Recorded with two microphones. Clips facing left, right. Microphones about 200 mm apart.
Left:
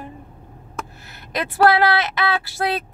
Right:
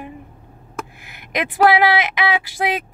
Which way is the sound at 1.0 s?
15° right (ahead or behind).